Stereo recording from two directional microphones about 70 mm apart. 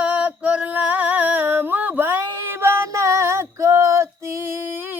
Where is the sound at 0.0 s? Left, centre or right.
Right.